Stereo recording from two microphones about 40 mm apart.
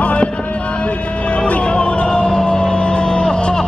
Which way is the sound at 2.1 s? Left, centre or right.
Centre.